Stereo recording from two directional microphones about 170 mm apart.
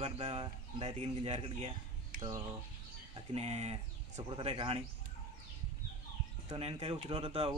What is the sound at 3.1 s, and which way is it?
Speech, 35° right (ahead or behind).